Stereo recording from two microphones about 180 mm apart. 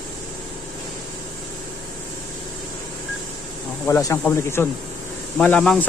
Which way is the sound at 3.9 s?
15° left (ahead or behind).